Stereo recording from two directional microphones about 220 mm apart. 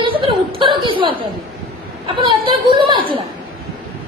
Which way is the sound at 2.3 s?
20° right (ahead or behind).